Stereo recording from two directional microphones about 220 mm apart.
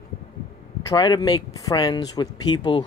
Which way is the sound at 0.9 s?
20° left (ahead or behind).